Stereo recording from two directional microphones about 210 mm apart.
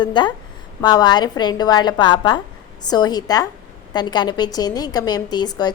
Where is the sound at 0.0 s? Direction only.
20° left (ahead or behind).